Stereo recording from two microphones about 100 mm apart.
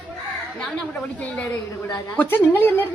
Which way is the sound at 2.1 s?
20° left (ahead or behind).